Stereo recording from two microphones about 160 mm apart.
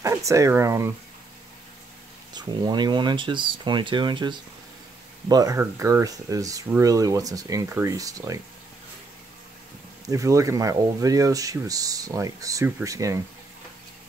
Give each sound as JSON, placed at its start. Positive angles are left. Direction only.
{"t": 0.0, "sound": "speech", "side_deg": -20}
{"t": 2.3, "sound": "speech", "side_deg": -25}
{"t": 10.0, "sound": "speech", "side_deg": -20}